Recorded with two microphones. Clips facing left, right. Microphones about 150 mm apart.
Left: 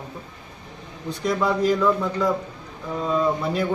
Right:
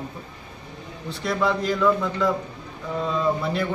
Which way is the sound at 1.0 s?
15° left (ahead or behind).